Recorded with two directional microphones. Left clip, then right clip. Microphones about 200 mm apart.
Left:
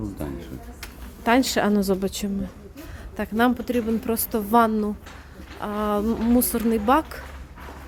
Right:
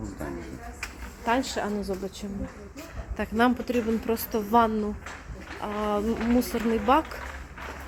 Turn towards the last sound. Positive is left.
turn(degrees=20)  # may be behind; listen again after turning